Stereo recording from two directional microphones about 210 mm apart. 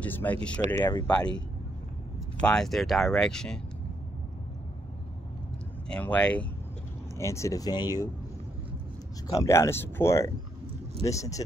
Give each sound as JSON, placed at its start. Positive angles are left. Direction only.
{"t": 0.0, "sound": "speech", "side_deg": 10}
{"t": 2.4, "sound": "speech", "side_deg": 5}
{"t": 5.9, "sound": "speech", "side_deg": 5}
{"t": 9.3, "sound": "speech", "side_deg": 15}